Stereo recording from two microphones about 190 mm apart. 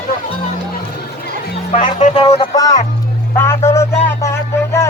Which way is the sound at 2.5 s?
20° left (ahead or behind).